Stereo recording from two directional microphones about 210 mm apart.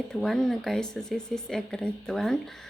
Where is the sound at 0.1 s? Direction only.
Centre (ahead or behind).